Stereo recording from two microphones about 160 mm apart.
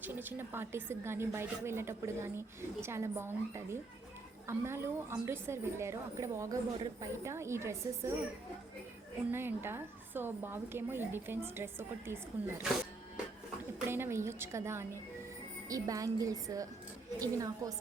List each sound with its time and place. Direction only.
0.0 s a woman's voice: 10° right (ahead or behind)
9.3 s a woman's voice: 15° right (ahead or behind)
13.8 s a woman's voice: 15° right (ahead or behind)